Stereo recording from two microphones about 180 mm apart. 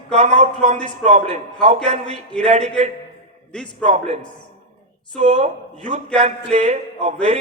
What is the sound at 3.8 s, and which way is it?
Speech, 40° right (ahead or behind).